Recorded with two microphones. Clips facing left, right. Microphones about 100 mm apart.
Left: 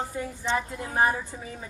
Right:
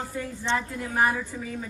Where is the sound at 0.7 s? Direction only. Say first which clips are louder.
Even; 25° left (ahead or behind).